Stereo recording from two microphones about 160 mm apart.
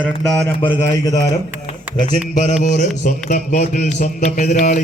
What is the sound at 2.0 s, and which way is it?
Speech, 50° left (ahead or behind).